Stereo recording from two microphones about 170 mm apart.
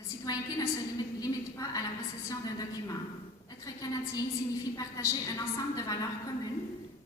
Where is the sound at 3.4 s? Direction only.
20° left (ahead or behind).